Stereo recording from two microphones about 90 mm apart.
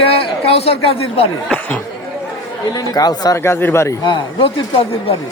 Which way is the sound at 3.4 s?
30° left (ahead or behind).